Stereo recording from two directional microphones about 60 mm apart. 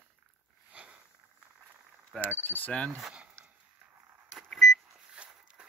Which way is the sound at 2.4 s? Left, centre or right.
Left.